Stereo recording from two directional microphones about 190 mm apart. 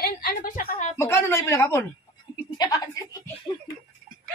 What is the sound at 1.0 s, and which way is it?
A woman's voice, 10° left (ahead or behind).